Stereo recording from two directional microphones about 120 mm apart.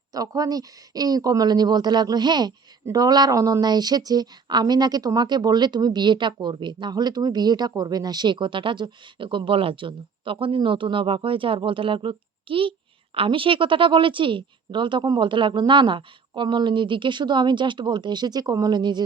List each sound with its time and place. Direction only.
0.1 s a woman's voice: 30° right (ahead or behind)